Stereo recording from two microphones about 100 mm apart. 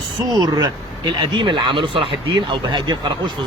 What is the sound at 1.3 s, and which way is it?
Speech, 50° right (ahead or behind).